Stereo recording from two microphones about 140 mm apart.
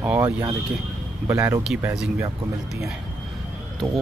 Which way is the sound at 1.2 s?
20° right (ahead or behind).